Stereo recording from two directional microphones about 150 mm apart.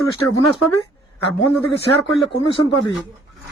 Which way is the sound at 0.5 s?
35° left (ahead or behind).